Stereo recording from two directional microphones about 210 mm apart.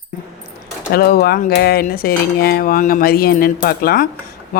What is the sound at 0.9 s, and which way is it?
Speech, 45° left (ahead or behind).